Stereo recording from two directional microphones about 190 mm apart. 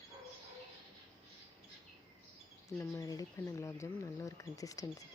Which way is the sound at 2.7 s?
15° left (ahead or behind).